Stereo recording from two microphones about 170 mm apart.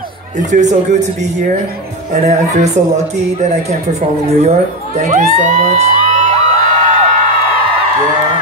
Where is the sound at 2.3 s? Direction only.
45° right (ahead or behind).